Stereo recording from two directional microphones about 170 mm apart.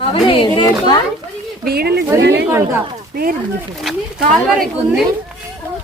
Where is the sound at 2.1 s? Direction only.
85° right.